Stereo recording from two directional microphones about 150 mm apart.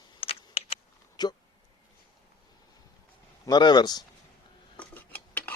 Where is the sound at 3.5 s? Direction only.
30° left (ahead or behind).